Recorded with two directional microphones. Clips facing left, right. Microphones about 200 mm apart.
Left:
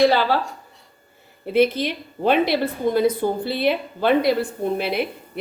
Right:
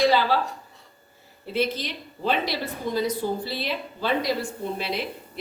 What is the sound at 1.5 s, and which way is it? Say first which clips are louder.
A woman's voice: left 8 dB; 55° left (ahead or behind).